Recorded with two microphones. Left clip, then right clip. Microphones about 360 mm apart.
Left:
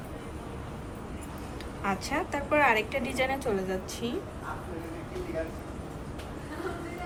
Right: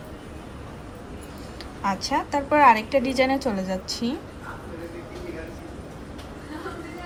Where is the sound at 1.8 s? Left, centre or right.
Centre.